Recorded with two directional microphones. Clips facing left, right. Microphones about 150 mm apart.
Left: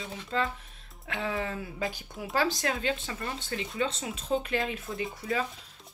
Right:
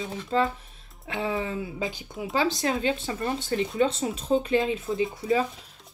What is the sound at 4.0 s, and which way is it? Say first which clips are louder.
Speech: right 7 dB; 45° right (ahead or behind).